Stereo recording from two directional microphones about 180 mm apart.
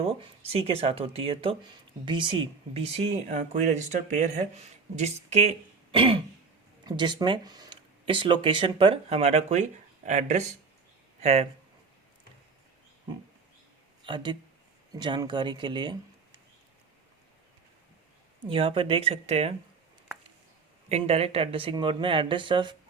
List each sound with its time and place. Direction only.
0.0 s speech: 35° right (ahead or behind)
14.0 s speech: 25° right (ahead or behind)
18.4 s speech: 30° right (ahead or behind)
20.9 s speech: 35° right (ahead or behind)